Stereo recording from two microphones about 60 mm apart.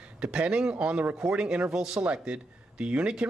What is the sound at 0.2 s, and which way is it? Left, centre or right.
Speech, centre.